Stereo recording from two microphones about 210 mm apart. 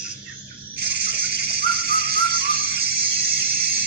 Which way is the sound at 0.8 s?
50° right (ahead or behind).